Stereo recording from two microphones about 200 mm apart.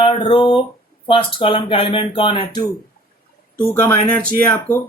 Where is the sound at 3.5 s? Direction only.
10° left (ahead or behind).